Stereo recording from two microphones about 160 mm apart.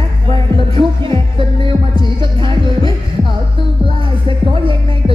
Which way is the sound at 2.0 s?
30° right (ahead or behind).